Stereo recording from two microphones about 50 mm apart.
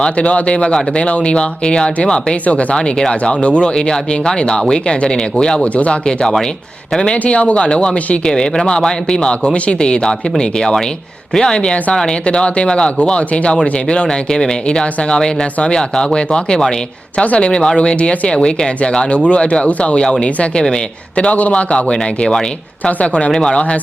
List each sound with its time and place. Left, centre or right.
0.0 s speech: left
5.6 s speech: left
22.3 s speech: centre